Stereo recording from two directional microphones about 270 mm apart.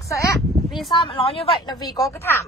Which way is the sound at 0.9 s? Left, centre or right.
Centre.